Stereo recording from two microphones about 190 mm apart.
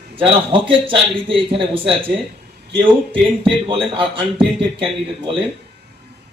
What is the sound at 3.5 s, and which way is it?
Speech, 30° right (ahead or behind).